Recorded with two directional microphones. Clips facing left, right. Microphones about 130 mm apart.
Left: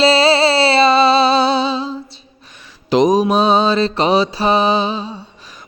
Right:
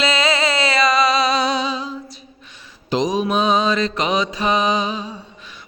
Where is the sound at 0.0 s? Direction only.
30° left (ahead or behind).